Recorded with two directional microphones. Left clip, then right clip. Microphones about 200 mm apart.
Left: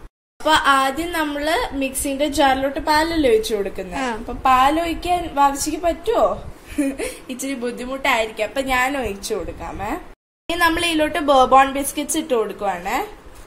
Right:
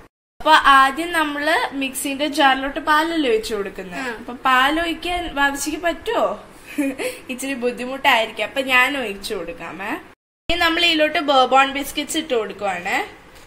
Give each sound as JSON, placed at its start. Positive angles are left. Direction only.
{"t": 0.4, "sound": "a woman's voice", "side_deg": 0}
{"t": 3.9, "sound": "a woman's voice", "side_deg": 45}
{"t": 4.4, "sound": "a woman's voice", "side_deg": -5}